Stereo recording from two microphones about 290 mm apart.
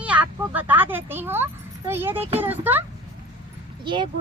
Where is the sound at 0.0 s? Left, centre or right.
Centre.